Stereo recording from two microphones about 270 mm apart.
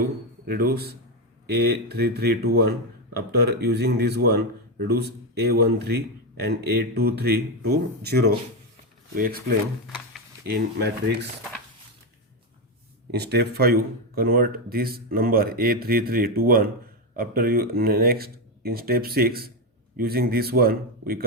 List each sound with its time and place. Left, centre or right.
0.4 s speech: right
13.1 s speech: right